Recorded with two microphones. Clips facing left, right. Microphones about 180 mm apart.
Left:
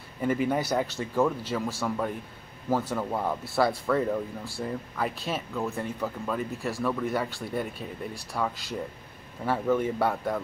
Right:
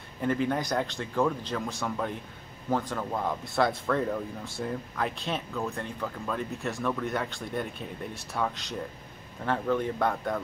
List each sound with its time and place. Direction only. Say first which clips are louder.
0.2 s speech: left 2 dB; 10° left (ahead or behind)